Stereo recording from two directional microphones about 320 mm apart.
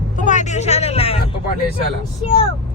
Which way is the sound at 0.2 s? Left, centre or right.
Left.